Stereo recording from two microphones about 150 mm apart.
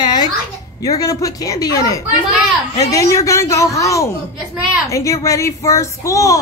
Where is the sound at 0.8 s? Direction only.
25° left (ahead or behind).